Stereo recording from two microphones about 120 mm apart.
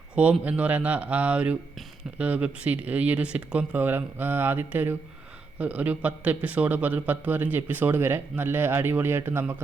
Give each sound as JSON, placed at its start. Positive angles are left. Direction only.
{"t": 0.2, "sound": "a man's voice", "side_deg": -10}